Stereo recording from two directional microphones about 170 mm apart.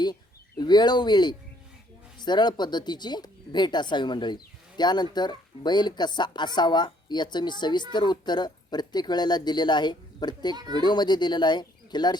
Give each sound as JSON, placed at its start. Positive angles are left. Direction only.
{"t": 0.6, "sound": "speech", "side_deg": 25}
{"t": 10.5, "sound": "speech", "side_deg": -25}
{"t": 10.8, "sound": "speech", "side_deg": 25}